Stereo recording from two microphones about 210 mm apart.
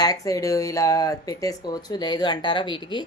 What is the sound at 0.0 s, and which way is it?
A woman's voice, 15° left (ahead or behind).